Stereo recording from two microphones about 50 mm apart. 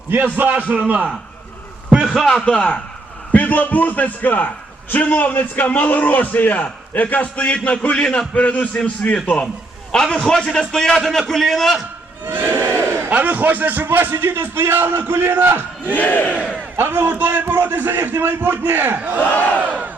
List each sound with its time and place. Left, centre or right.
0.3 s a man's voice: right
2.4 s a man's voice: centre
3.3 s a man's voice: left; by 11.9 s centre
12.2 s a sound: right
13.1 s speech: right
15.9 s a man's voice: left
16.7 s speech: right
19.0 s a man's voice: right
19.3 s a man's voice: left